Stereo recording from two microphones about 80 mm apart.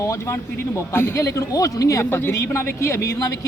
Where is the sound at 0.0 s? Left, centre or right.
Left.